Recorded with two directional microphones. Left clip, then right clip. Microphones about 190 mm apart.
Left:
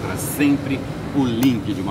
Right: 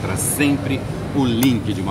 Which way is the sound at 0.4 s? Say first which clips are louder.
Even; 5° right (ahead or behind).